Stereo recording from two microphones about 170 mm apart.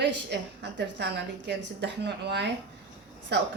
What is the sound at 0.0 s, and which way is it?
A woman's voice, 90° right.